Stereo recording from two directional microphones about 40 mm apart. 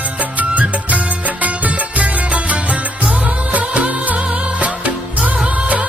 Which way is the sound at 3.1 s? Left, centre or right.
Right.